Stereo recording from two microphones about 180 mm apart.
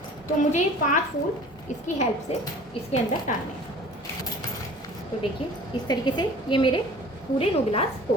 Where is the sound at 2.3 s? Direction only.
35° left (ahead or behind).